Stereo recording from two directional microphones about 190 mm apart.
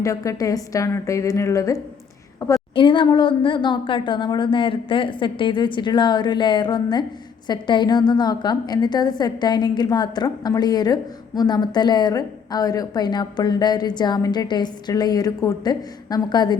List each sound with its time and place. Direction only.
0.0 s a woman's voice: 15° left (ahead or behind)